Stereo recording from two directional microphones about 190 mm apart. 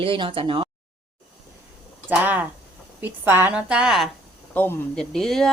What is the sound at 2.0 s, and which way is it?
Speech, 10° right (ahead or behind).